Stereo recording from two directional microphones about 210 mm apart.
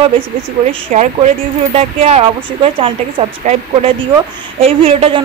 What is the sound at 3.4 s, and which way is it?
A woman's voice, 35° right (ahead or behind).